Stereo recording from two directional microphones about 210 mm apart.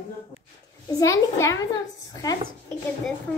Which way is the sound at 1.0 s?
15° left (ahead or behind).